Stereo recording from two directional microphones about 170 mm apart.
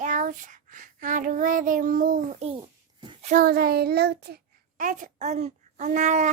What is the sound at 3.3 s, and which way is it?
Child singing, 50° right (ahead or behind).